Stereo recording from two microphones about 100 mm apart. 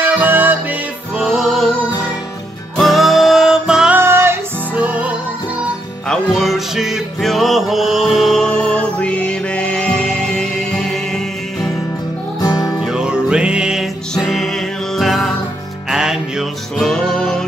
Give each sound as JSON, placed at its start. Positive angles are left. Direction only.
{"t": 0.0, "sound": "music", "side_deg": -20}
{"t": 1.1, "sound": "music", "side_deg": -5}
{"t": 2.8, "sound": "music", "side_deg": 0}
{"t": 3.9, "sound": "music", "side_deg": -25}
{"t": 4.7, "sound": "music", "side_deg": -15}
{"t": 6.0, "sound": "music", "side_deg": 0}
{"t": 12.4, "sound": "music", "side_deg": 40}
{"t": 12.8, "sound": "music", "side_deg": -5}
{"t": 14.1, "sound": "music", "side_deg": 5}